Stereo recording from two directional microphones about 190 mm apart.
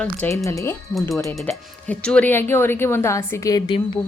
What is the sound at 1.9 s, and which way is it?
A woman's voice, 5° left (ahead or behind).